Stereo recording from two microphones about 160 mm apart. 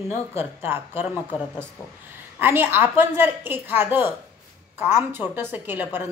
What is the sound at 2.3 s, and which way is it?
A woman's voice, 15° right (ahead or behind).